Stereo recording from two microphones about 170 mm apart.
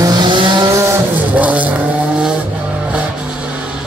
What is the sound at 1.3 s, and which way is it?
Vehicle, 10° right (ahead or behind).